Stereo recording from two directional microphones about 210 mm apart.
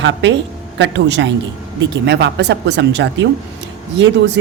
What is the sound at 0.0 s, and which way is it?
Speech, 60° right (ahead or behind).